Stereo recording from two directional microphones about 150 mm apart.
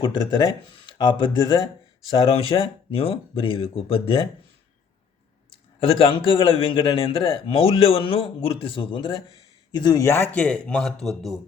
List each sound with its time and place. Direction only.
0.0 s speech: 30° left (ahead or behind)
5.8 s speech: 35° left (ahead or behind); by 11.3 s centre (ahead or behind)